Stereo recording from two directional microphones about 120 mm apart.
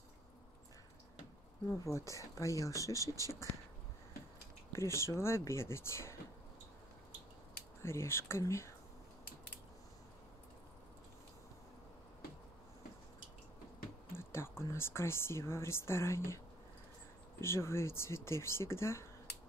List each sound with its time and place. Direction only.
1.7 s speech: 25° left (ahead or behind)
4.7 s speech: 20° left (ahead or behind)
7.8 s speech: 20° left (ahead or behind)
14.1 s speech: 20° left (ahead or behind)
17.4 s speech: 20° left (ahead or behind)